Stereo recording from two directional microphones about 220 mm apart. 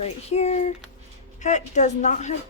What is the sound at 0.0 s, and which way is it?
Speech, 30° left (ahead or behind).